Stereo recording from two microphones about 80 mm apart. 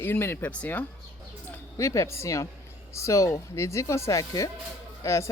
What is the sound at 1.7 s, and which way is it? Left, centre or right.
Speech, left.